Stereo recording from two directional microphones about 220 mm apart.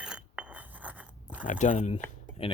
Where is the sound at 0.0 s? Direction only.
5° right (ahead or behind).